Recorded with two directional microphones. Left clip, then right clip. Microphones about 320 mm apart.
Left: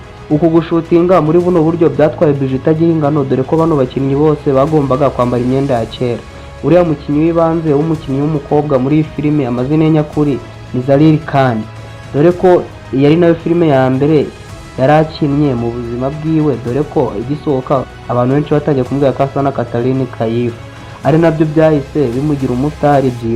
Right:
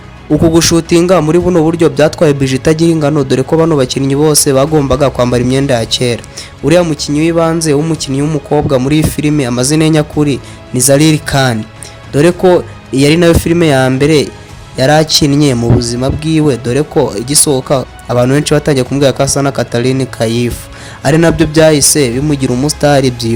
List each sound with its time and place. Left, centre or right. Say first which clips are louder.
0.5 s a man's voice: right 2 dB; right